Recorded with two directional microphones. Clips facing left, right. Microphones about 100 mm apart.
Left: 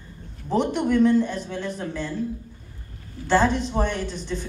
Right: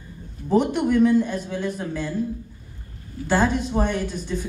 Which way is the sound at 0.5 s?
10° right (ahead or behind).